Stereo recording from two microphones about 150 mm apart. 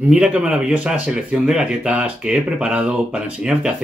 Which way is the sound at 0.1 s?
5° right (ahead or behind).